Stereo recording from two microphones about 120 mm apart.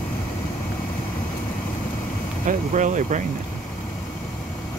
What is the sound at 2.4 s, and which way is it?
Speech, 90° right.